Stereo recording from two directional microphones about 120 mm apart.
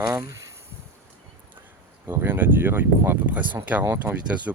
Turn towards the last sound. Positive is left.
turn(degrees=-10)  # may be behind; listen again after turning